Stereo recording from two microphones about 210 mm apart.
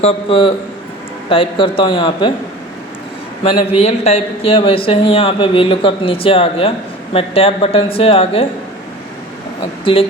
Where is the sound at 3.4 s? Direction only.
25° left (ahead or behind).